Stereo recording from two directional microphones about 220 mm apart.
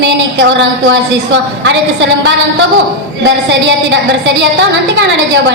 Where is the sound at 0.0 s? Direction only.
55° right (ahead or behind).